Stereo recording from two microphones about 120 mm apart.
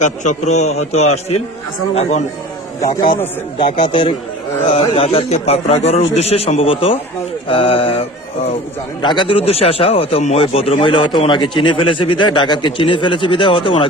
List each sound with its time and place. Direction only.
0.0 s a man's voice: 70° left (ahead or behind)
3.7 s speech: 45° left (ahead or behind)
4.7 s a man's voice: 55° left (ahead or behind)